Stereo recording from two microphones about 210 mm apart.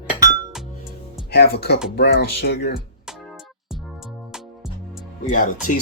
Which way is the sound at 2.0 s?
55° left (ahead or behind).